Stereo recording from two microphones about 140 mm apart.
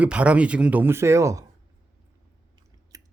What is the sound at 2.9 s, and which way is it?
Chewing, 25° right (ahead or behind).